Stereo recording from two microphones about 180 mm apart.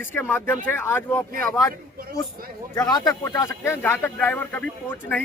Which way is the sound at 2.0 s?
55° right (ahead or behind).